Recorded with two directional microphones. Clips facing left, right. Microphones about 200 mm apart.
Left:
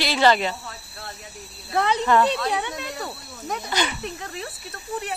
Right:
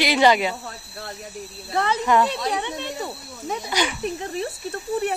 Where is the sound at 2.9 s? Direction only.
10° right (ahead or behind).